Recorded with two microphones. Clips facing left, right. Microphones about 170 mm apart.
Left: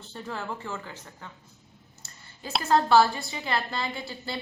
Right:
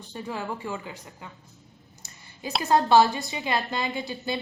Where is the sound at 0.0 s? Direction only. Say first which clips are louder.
Right 3 dB; 15° right (ahead or behind).